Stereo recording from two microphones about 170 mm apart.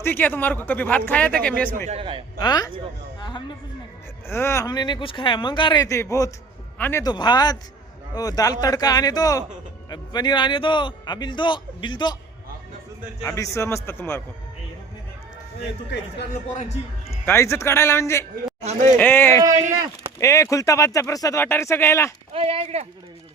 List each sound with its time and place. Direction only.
0.0 s speech: 10° left (ahead or behind)
1.9 s speech: 30° right (ahead or behind)
2.4 s a man's voice: 25° left (ahead or behind)
3.2 s a sound: 25° left (ahead or behind)
4.3 s a man's voice: 15° left (ahead or behind)
7.0 s a man's voice: 25° left (ahead or behind)
13.2 s speech: 15° left (ahead or behind)
16.6 s a man's voice: 40° left (ahead or behind)
17.2 s speech: 15° left (ahead or behind)
18.6 s speech: 40° right (ahead or behind)
18.9 s speech: 10° left (ahead or behind)
22.3 s speech: 35° right (ahead or behind)